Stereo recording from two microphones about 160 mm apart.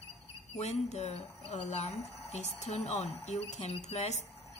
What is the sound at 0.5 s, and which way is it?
Speech, 45° left (ahead or behind).